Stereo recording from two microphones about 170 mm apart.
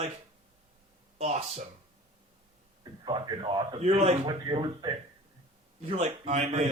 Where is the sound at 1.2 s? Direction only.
40° right (ahead or behind).